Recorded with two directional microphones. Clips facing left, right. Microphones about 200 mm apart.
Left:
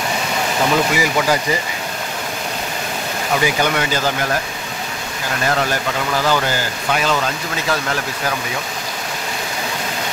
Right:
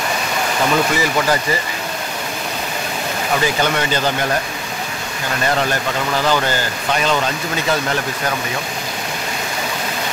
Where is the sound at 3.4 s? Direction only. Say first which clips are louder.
Left 1 dB; 10° left (ahead or behind).